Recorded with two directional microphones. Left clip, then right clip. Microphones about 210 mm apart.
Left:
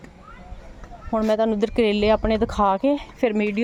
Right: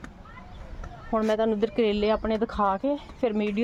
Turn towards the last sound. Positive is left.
turn(degrees=25)  # may be behind; listen again after turning